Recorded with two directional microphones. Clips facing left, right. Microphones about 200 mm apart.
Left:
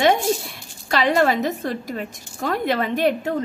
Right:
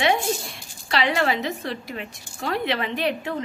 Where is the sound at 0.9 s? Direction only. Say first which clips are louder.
Left 4 dB; 45° left (ahead or behind).